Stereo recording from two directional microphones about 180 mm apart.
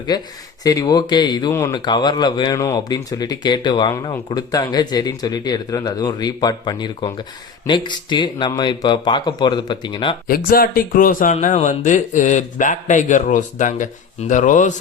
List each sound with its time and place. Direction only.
0.1 s speech: 20° left (ahead or behind)
10.2 s speech: 55° left (ahead or behind)